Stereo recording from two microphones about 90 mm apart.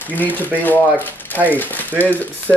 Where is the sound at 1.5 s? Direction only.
20° left (ahead or behind).